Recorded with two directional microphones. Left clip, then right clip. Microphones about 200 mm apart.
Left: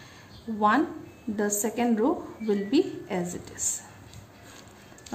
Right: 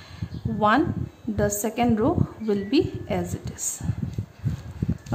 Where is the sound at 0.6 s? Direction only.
20° right (ahead or behind).